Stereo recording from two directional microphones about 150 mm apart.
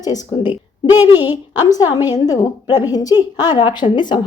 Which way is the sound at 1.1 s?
15° right (ahead or behind).